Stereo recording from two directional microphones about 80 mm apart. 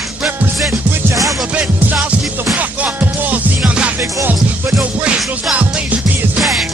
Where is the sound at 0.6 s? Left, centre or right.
Right.